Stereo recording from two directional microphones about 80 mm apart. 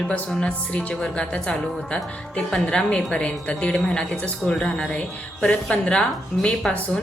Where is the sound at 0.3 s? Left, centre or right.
Centre.